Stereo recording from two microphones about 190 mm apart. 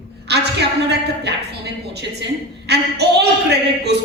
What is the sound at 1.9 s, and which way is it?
A woman's voice, 60° right (ahead or behind).